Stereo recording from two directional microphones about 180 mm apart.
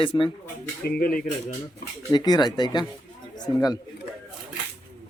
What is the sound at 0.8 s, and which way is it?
Speech, 55° left (ahead or behind).